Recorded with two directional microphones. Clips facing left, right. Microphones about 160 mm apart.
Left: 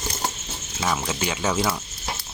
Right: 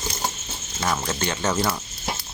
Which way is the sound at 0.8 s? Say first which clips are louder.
Even; 5° left (ahead or behind).